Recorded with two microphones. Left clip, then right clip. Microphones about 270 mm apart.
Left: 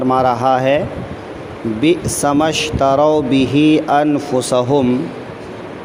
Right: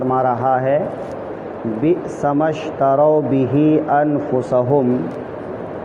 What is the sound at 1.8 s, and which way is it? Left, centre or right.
Speech, left.